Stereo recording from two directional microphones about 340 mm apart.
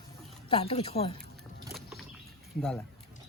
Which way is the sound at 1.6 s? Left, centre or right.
Centre.